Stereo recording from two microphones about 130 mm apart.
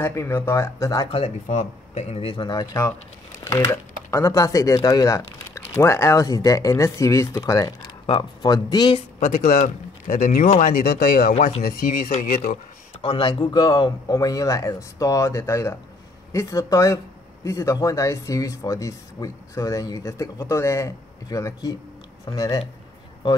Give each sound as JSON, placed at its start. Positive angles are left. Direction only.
{"t": 0.0, "sound": "speech", "side_deg": 20}
{"t": 1.1, "sound": "speech", "side_deg": 55}
{"t": 9.2, "sound": "speech", "side_deg": 70}
{"t": 13.0, "sound": "speech", "side_deg": 40}